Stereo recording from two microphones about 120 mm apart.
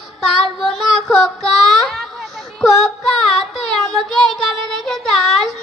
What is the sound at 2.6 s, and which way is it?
A woman's voice, centre (ahead or behind).